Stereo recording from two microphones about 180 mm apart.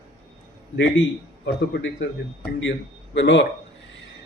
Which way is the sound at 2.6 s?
85° left.